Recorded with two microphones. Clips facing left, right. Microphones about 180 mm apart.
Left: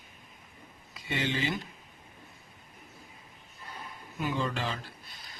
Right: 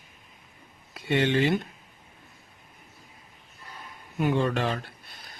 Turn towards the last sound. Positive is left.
turn(degrees=-60)  # may be behind; listen again after turning